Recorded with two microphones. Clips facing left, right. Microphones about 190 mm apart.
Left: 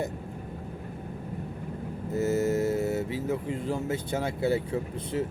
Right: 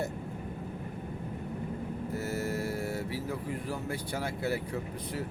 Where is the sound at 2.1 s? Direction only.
20° left (ahead or behind).